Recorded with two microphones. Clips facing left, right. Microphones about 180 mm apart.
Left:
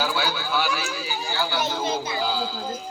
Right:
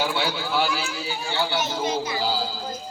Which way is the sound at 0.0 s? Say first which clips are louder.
Right 1 dB; 25° right (ahead or behind).